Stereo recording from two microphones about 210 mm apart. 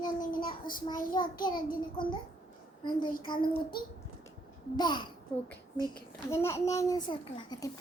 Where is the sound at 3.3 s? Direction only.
20° left (ahead or behind).